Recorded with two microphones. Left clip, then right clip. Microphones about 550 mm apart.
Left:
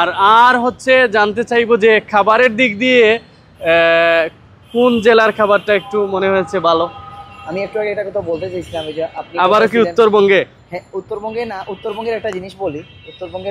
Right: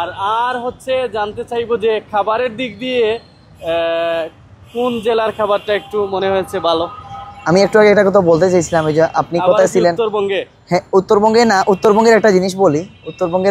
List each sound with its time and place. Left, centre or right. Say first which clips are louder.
0.0 s a man's voice: left 8 dB; left
7.4 s speech: right 10 dB; right
9.4 s speech: left 1 dB; left
10.7 s speech: right 12 dB; right